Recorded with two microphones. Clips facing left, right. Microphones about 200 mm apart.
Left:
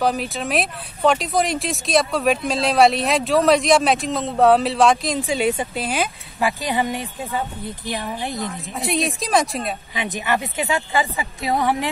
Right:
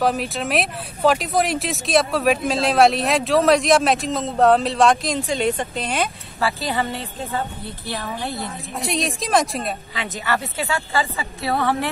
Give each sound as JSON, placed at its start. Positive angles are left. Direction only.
{"t": 0.0, "sound": "speech", "side_deg": 0}
{"t": 6.4, "sound": "speech", "side_deg": 15}
{"t": 8.7, "sound": "speech", "side_deg": 0}
{"t": 9.9, "sound": "speech", "side_deg": 15}